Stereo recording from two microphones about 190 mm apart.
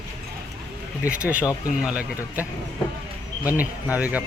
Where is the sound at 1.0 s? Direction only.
5° right (ahead or behind).